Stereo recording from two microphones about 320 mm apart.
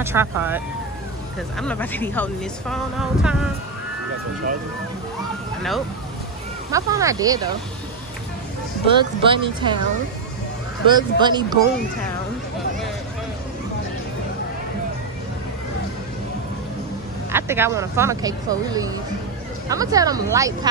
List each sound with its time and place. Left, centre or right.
0.0 s speech: centre
1.6 s speech: centre
6.7 s speech: centre
8.8 s speech: centre
10.9 s speech: centre
17.3 s speech: centre